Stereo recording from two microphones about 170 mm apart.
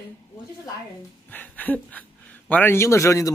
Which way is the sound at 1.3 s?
10° left (ahead or behind).